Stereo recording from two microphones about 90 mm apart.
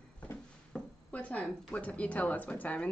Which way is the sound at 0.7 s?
15° left (ahead or behind).